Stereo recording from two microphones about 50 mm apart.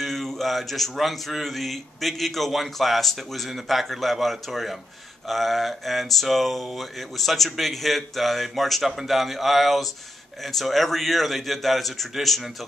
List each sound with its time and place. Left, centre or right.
0.0 s speech: centre